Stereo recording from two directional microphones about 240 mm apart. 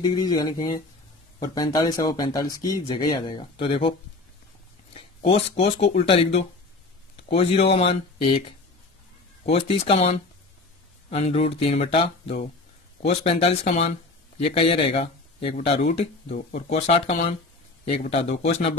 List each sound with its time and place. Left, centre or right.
0.0 s speech: centre
4.9 s speech: left